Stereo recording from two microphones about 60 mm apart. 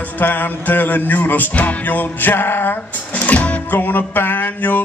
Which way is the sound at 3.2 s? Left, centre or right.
Left.